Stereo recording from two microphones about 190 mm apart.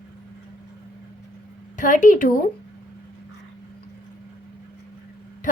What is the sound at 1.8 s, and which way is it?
Speech, 40° left (ahead or behind).